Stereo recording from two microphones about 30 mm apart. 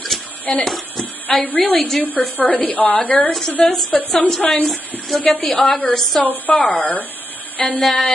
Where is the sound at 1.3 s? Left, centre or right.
Centre.